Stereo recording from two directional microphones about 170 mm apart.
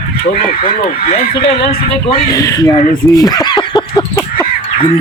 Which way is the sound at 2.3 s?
20° left (ahead or behind).